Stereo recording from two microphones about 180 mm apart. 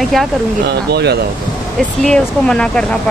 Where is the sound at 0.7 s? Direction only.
65° right (ahead or behind).